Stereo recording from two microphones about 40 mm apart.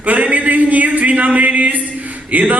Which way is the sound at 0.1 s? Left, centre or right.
Right.